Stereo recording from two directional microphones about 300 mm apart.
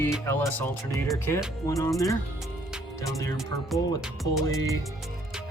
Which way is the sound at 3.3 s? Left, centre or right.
Centre.